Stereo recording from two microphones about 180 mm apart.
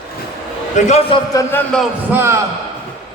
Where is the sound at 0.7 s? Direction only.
40° left (ahead or behind).